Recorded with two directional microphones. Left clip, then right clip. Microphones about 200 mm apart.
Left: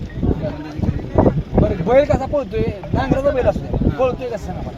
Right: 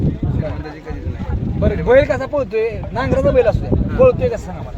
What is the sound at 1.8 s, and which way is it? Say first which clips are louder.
Speech: right 3 dB; 10° right (ahead or behind).